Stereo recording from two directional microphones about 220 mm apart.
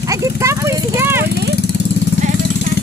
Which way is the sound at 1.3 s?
50° left (ahead or behind).